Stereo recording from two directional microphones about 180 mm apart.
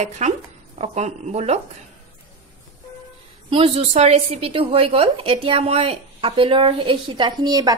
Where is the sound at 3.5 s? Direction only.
30° right (ahead or behind).